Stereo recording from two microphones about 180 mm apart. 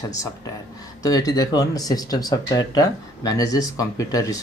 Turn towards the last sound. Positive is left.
turn(degrees=20)  # may be behind; listen again after turning